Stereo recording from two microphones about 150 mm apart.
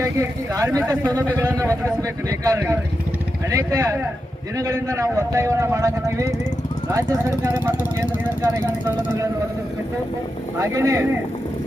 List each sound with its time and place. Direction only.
0.0 s speech: 20° right (ahead or behind)
10.6 s speech: 20° right (ahead or behind)